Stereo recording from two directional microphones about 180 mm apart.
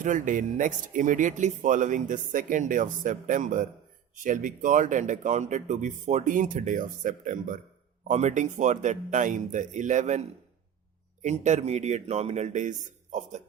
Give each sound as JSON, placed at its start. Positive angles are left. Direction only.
{"t": 0.0, "sound": "a man's voice", "side_deg": -45}